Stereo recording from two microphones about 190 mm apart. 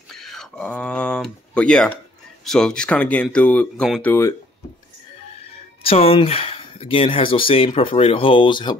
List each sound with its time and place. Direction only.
0.1 s a sound: centre (ahead or behind)
2.4 s speech: 5° left (ahead or behind)
4.1 s speech: 15° left (ahead or behind)
5.9 s speech: 30° left (ahead or behind)